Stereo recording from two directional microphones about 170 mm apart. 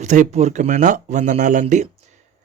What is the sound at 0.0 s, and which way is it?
Speech, 45° right (ahead or behind).